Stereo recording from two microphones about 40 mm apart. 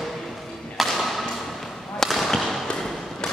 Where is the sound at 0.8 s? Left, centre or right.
Centre.